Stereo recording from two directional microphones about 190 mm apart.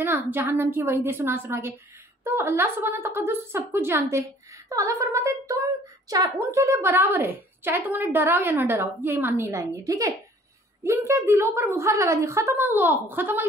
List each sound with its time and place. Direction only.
0.0 s a woman's voice: 10° right (ahead or behind)